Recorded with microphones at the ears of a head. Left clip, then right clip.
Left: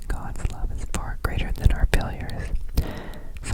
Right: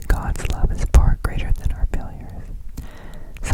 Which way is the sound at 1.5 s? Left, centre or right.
Left.